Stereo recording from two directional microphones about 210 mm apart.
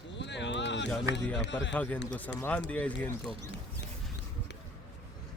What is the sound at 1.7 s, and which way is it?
Speech, 5° left (ahead or behind).